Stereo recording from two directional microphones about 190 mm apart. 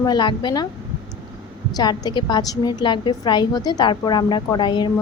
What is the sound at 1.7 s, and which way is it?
A woman's voice, 20° left (ahead or behind).